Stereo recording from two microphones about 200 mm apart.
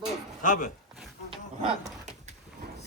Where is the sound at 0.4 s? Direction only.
40° left (ahead or behind).